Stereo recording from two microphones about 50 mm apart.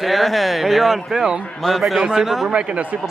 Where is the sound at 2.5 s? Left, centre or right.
Right.